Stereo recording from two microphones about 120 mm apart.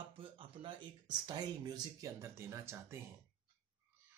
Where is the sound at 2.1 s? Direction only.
20° right (ahead or behind).